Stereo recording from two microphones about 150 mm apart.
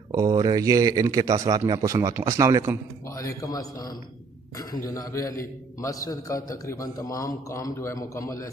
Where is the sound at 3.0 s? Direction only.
20° left (ahead or behind).